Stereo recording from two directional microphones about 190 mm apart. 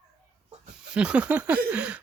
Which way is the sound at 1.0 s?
5° right (ahead or behind).